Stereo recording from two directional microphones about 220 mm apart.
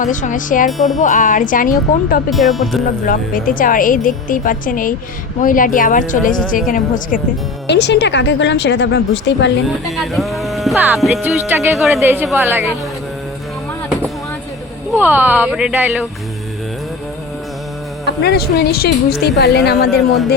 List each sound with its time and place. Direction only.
0.0 s a woman's voice: 35° left (ahead or behind)
0.7 s speech: centre (ahead or behind)
1.0 s a woman's voice: 35° left (ahead or behind)
2.3 s speech: centre (ahead or behind)
3.1 s a woman's voice: 40° left (ahead or behind)
7.7 s a woman's voice: 50° left (ahead or behind)
9.8 s speech: centre (ahead or behind)
14.9 s speech: 10° right (ahead or behind)
18.0 s a woman's voice: 45° left (ahead or behind)